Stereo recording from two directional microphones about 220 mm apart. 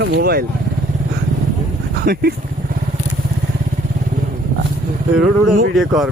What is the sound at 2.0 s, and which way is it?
Speech, 45° right (ahead or behind).